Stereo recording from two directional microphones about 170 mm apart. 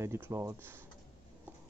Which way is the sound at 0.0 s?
15° right (ahead or behind).